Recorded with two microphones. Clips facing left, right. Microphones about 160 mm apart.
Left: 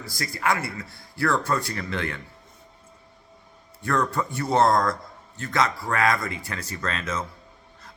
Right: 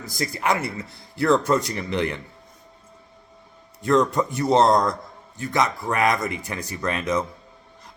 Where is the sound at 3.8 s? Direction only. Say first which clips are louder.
Right 6 dB; 20° right (ahead or behind).